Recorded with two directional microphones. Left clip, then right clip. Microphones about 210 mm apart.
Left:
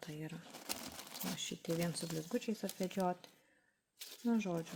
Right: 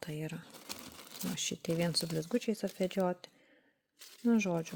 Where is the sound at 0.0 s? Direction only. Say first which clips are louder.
Right 6 dB; 45° right (ahead or behind).